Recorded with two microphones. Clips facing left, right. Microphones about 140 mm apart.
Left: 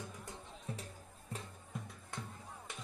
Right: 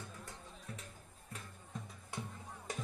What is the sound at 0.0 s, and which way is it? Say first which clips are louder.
Music: left 2 dB; 20° left (ahead or behind).